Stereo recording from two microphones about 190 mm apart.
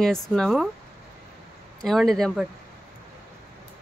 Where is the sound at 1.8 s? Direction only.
Centre (ahead or behind).